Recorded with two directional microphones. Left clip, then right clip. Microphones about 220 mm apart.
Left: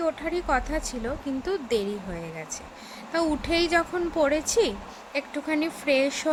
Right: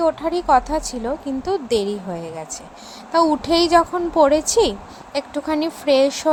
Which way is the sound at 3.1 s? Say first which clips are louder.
Right 9 dB; 15° right (ahead or behind).